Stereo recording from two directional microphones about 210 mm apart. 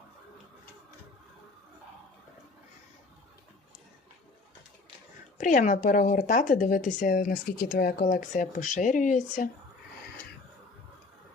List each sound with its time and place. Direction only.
5.4 s speech: 35° left (ahead or behind)